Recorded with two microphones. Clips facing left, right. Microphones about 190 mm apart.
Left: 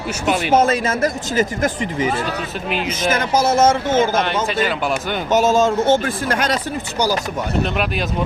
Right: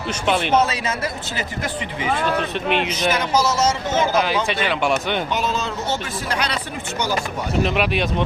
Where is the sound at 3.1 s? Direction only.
50° left (ahead or behind).